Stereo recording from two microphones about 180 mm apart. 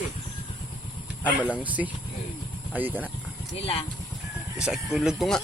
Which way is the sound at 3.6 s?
30° left (ahead or behind).